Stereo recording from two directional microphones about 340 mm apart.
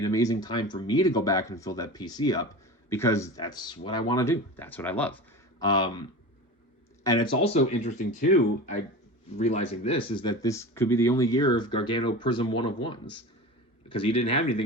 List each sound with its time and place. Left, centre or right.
0.0 s speech: centre